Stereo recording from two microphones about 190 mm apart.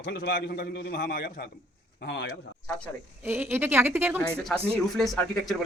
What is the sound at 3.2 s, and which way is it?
Speech, 10° right (ahead or behind).